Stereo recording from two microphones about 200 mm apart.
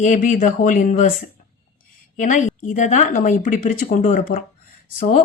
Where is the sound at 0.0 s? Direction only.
40° left (ahead or behind).